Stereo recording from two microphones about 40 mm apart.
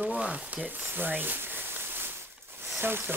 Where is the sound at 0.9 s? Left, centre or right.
Right.